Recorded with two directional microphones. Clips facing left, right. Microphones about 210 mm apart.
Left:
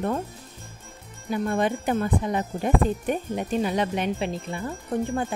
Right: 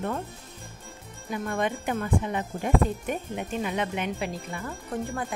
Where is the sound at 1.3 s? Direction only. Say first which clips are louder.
Left 4 dB; 35° left (ahead or behind).